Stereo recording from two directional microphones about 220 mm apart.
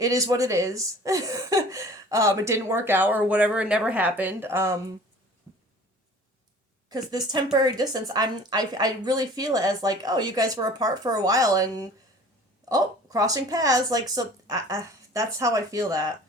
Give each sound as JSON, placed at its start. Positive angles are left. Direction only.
{"t": 0.0, "sound": "speech", "side_deg": -15}
{"t": 6.9, "sound": "speech", "side_deg": -20}